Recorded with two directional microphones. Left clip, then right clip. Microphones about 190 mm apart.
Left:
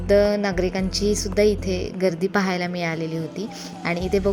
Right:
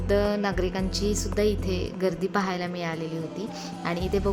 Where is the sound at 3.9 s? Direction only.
20° left (ahead or behind).